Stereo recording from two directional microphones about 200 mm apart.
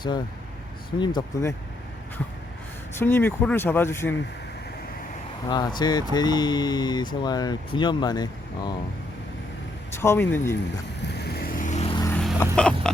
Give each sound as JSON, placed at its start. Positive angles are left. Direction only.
{"t": 0.9, "sound": "speech", "side_deg": 20}
{"t": 2.9, "sound": "speech", "side_deg": 10}
{"t": 5.5, "sound": "speech", "side_deg": 20}
{"t": 10.0, "sound": "speech", "side_deg": 10}
{"t": 11.1, "sound": "vehicle", "side_deg": 55}
{"t": 12.0, "sound": "vehicle", "side_deg": 10}
{"t": 12.5, "sound": "a sound", "side_deg": 5}